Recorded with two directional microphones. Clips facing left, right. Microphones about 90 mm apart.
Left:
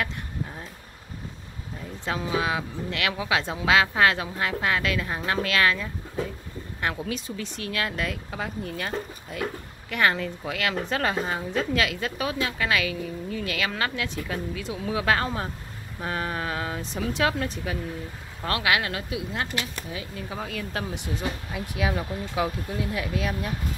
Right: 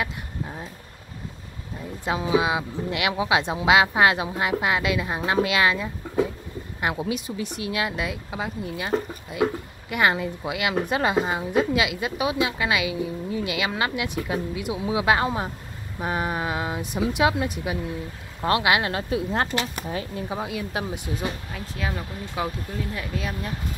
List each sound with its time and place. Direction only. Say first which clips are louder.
0.0 s a sound: right 1 dB; 15° right (ahead or behind)
2.0 s speech: right 4 dB; 15° right (ahead or behind); by 19.7 s 35° right (ahead or behind)
20.2 s speech: right 4 dB; 20° right (ahead or behind)
21.5 s speech: left 3 dB; 10° left (ahead or behind)